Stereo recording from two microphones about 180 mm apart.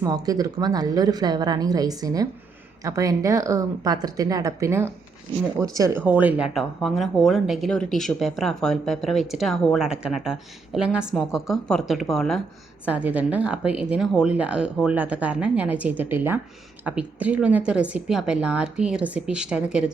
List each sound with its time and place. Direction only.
0.0 s a woman's voice: 20° right (ahead or behind); by 12.4 s centre (ahead or behind)
12.8 s a woman's voice: 10° right (ahead or behind)